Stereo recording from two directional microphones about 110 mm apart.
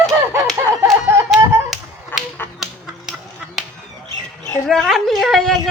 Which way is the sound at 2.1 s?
20° left (ahead or behind).